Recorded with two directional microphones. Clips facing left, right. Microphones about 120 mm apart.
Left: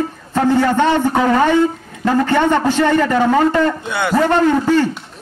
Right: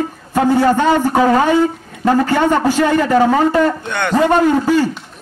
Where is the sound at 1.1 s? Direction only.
35° right (ahead or behind).